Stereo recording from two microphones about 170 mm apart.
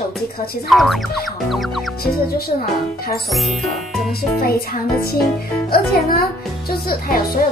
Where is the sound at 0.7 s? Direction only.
Centre (ahead or behind).